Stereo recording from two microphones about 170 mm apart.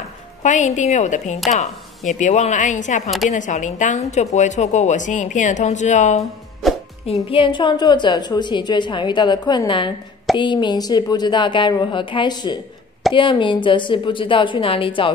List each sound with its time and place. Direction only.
0.4 s a woman's voice: 45° left (ahead or behind)
7.2 s a woman's voice: 30° left (ahead or behind)